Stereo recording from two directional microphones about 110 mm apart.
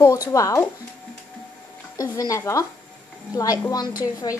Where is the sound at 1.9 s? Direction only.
30° left (ahead or behind).